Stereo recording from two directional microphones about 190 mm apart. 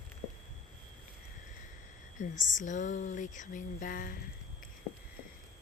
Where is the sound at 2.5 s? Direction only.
40° left (ahead or behind).